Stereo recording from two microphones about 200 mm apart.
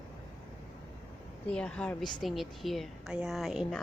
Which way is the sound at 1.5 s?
5° left (ahead or behind).